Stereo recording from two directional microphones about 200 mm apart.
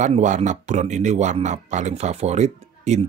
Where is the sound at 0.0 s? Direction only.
35° right (ahead or behind).